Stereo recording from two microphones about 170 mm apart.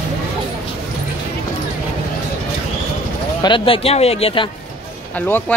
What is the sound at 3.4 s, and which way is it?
Speech, 30° left (ahead or behind).